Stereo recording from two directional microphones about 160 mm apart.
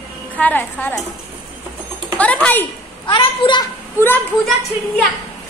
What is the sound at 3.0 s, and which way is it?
Speech, 30° left (ahead or behind).